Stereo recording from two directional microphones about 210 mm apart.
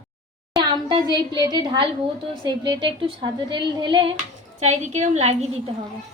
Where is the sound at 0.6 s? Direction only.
20° right (ahead or behind).